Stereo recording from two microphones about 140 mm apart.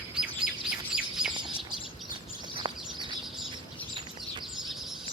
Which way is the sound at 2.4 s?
35° right (ahead or behind).